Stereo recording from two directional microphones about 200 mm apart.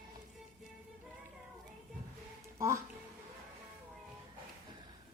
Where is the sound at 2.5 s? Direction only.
15° right (ahead or behind).